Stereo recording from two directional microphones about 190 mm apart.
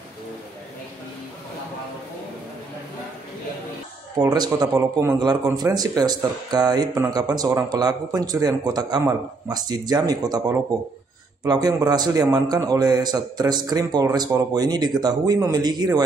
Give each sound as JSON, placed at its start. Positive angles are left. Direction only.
{"t": 4.2, "sound": "speech", "side_deg": -20}